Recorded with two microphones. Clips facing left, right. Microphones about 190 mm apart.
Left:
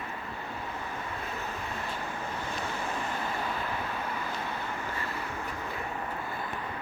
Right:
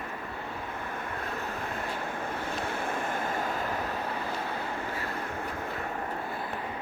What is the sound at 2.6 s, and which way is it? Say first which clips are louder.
Vehicle: right 2 dB; 55° right (ahead or behind).